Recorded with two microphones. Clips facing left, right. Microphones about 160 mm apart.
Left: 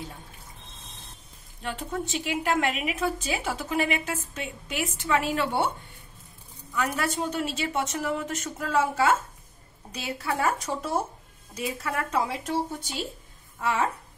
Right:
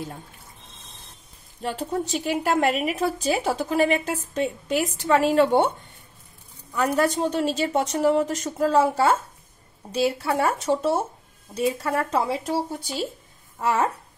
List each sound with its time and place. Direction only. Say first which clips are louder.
1.6 s a woman's voice: right 5 dB; 35° right (ahead or behind)
6.7 s a woman's voice: right 7 dB; 40° right (ahead or behind)